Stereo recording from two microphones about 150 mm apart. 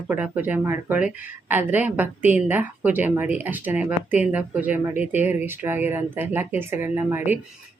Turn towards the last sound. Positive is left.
turn(degrees=-15)  # may be behind; listen again after turning